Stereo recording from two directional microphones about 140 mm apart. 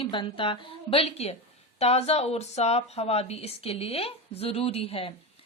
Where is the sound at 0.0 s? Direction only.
40° left (ahead or behind).